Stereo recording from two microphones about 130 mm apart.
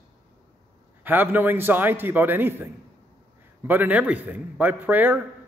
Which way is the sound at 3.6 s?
15° right (ahead or behind).